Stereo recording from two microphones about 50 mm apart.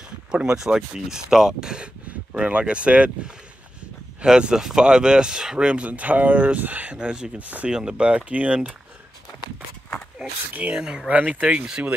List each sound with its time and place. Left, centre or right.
0.3 s speech: centre
7.0 s speech: centre
7.3 s speech: right
7.7 s speech: centre
10.5 s speech: right
10.8 s speech: centre
11.1 s speech: right